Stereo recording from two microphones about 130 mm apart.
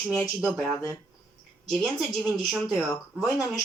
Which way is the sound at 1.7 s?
Centre (ahead or behind).